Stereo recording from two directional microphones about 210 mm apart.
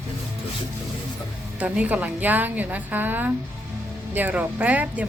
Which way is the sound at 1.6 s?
5° right (ahead or behind).